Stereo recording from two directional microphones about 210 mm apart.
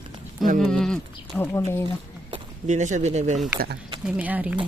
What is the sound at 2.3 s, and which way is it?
Speech, 35° right (ahead or behind).